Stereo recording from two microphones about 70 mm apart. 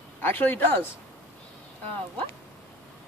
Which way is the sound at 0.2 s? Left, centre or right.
Left.